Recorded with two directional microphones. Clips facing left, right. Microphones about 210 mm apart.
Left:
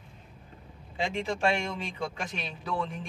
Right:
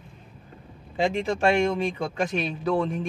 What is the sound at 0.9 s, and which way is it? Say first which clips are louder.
Speech: right 6 dB; 45° right (ahead or behind).